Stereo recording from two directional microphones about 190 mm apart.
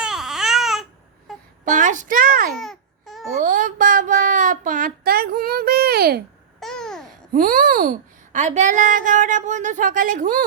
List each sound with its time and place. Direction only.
0.0 s baby cry: 5° right (ahead or behind)
1.7 s a sound: 40° right (ahead or behind)
2.6 s babbling: centre (ahead or behind)
3.4 s a sound: 45° right (ahead or behind)
6.6 s babbling: 5° left (ahead or behind)
7.3 s a child's voice: 45° right (ahead or behind)